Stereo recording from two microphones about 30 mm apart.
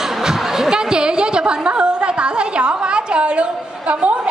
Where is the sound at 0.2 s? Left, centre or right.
Centre.